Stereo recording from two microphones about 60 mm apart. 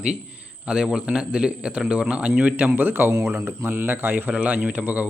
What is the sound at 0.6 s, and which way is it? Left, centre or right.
A man's voice, centre.